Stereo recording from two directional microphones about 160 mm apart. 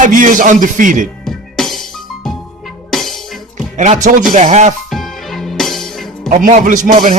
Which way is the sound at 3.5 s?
45° right (ahead or behind).